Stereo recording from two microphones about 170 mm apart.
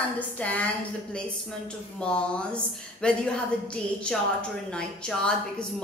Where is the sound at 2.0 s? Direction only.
5° left (ahead or behind).